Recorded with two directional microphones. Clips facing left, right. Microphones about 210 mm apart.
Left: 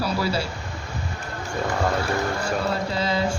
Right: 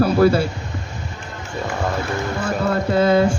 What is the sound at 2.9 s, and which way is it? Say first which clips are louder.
Speech: right 10 dB; 55° right (ahead or behind).